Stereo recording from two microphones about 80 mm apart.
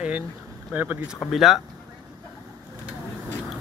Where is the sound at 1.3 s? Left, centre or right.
Centre.